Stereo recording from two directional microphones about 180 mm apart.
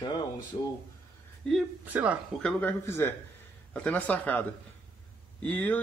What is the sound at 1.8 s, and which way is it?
Speech, 10° right (ahead or behind).